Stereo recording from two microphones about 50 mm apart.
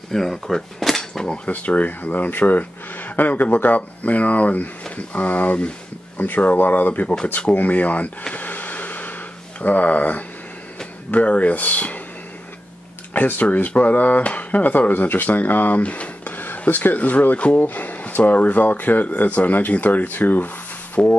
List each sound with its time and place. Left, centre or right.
0.1 s cutlery: centre
1.2 s cutlery: left
1.5 s speech: left
8.4 s a sound: left
9.6 s speech: left
13.1 s speech: left